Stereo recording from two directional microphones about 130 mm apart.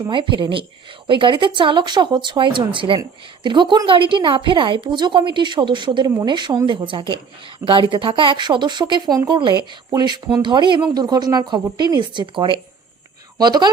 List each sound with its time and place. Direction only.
0.1 s a woman's voice: 40° right (ahead or behind)